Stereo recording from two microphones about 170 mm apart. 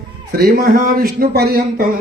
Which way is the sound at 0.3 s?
60° right (ahead or behind).